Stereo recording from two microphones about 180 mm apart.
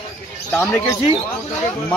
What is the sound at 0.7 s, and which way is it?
Speech, 15° left (ahead or behind).